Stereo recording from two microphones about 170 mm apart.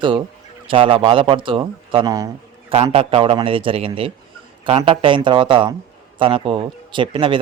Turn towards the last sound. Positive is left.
turn(degrees=-30)  # may be behind; listen again after turning